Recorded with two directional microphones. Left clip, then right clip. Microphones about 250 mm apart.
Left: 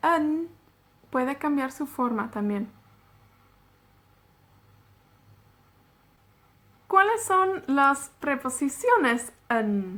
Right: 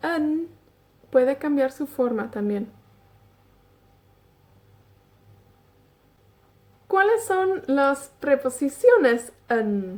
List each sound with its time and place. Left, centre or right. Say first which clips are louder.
0.0 s a sound: left 2 dB; centre
1.1 s a woman's voice: right 6 dB; centre
6.9 s a woman's voice: right 1 dB; centre